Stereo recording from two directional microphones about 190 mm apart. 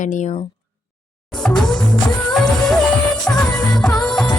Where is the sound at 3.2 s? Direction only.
5° left (ahead or behind).